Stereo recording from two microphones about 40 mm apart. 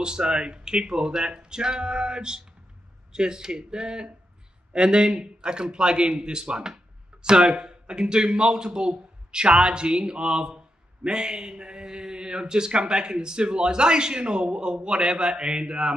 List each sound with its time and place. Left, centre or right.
0.0 s a man's voice: right